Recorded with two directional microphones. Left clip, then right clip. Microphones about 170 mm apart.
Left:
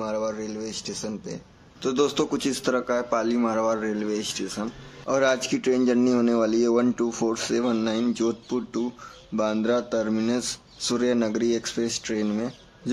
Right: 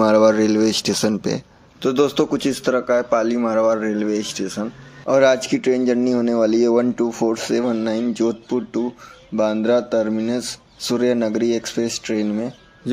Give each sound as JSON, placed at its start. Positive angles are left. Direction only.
{"t": 0.0, "sound": "speech", "side_deg": -50}
{"t": 1.8, "sound": "a man's voice", "side_deg": -20}